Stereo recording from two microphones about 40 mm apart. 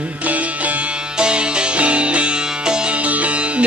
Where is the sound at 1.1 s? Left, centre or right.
Right.